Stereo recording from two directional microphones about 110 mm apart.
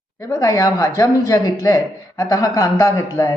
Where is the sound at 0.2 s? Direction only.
30° left (ahead or behind).